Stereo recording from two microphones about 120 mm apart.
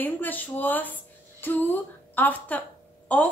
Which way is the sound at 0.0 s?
15° left (ahead or behind).